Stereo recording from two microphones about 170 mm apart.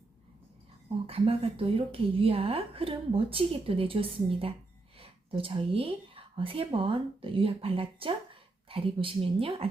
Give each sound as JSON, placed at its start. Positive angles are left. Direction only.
{"t": 1.0, "sound": "a woman's voice", "side_deg": -35}